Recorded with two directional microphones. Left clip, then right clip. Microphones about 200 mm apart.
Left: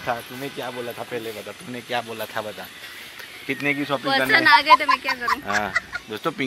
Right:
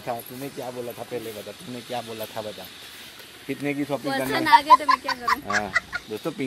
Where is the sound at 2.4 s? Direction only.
Centre (ahead or behind); by 4.7 s 20° right (ahead or behind).